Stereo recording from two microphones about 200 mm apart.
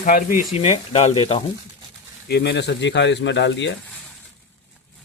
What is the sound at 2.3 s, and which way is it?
Speech, 55° left (ahead or behind).